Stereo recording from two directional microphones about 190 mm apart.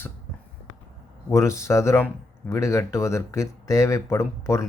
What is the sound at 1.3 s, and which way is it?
Speech, 15° left (ahead or behind).